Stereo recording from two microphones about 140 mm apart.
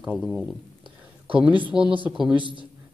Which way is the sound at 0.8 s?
40° right (ahead or behind).